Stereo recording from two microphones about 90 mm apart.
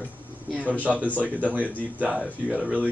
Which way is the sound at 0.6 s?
15° right (ahead or behind).